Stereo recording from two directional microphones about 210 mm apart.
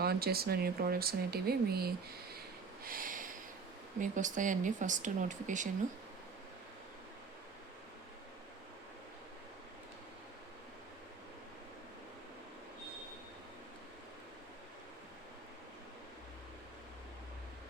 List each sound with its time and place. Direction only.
0.0 s speech: 50° right (ahead or behind)
2.8 s a sound: 40° right (ahead or behind)
4.0 s speech: 35° right (ahead or behind)